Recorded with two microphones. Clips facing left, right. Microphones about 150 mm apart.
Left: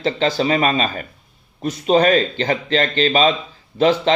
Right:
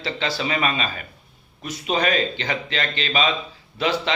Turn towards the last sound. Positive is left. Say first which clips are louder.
# left 8 dB
turn(degrees=40)  # may be behind; listen again after turning